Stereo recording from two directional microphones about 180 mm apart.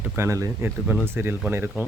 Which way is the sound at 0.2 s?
15° right (ahead or behind).